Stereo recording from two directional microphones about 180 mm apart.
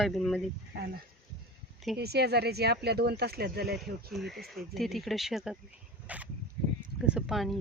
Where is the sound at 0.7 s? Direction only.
65° right (ahead or behind).